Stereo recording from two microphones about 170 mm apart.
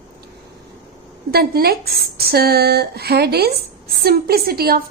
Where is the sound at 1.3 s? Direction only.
65° right (ahead or behind).